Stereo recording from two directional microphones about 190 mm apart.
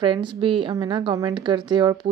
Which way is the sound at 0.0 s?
25° right (ahead or behind).